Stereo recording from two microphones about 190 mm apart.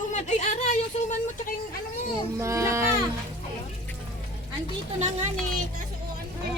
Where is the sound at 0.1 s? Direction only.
40° left (ahead or behind).